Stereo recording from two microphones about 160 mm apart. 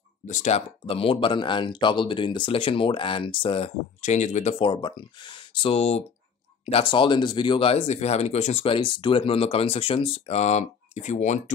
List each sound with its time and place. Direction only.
0.3 s speech: 45° left (ahead or behind)
4.6 s speech: 30° left (ahead or behind); by 11.5 s 50° left (ahead or behind)